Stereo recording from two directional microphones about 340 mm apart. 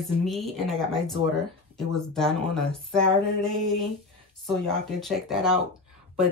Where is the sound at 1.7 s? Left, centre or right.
Centre.